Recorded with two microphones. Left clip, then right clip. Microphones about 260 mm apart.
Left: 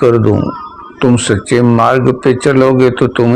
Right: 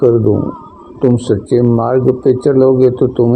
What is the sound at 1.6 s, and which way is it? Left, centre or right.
Speech, left.